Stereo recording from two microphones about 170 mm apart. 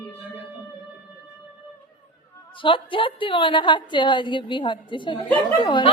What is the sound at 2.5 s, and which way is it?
A woman's voice, 30° left (ahead or behind).